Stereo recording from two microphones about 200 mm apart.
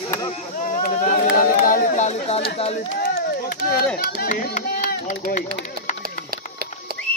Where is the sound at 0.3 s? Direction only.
40° left (ahead or behind).